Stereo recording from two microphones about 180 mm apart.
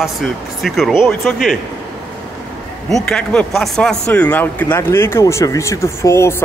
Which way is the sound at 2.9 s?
5° left (ahead or behind).